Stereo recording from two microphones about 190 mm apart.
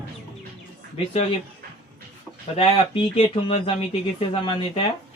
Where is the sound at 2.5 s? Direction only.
30° left (ahead or behind).